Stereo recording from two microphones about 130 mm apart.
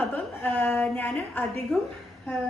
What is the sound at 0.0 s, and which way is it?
A woman's voice, 15° left (ahead or behind).